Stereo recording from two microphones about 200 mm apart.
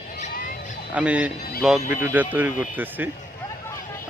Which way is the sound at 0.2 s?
40° left (ahead or behind).